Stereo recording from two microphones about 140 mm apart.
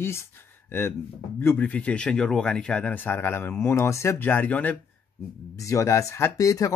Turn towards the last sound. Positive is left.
turn(degrees=25)  # may be behind; listen again after turning